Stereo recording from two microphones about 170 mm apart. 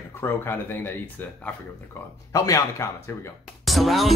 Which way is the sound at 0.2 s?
10° left (ahead or behind).